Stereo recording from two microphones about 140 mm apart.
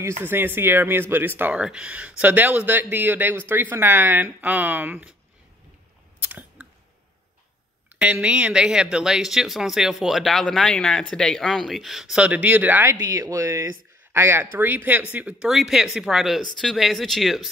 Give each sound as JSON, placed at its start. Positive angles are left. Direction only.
{"t": 0.0, "sound": "speech", "side_deg": -15}
{"t": 6.2, "sound": "chewing", "side_deg": -10}
{"t": 8.0, "sound": "speech", "side_deg": -10}